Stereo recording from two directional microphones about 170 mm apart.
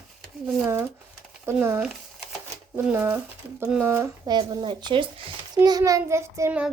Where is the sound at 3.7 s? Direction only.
15° right (ahead or behind); by 5.3 s 30° right (ahead or behind).